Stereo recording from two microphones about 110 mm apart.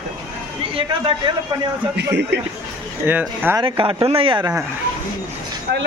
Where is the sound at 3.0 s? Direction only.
20° right (ahead or behind).